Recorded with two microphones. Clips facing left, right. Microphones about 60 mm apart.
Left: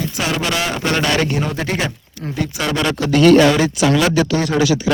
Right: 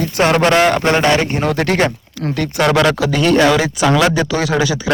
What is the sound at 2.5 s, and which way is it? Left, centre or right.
Speech, right.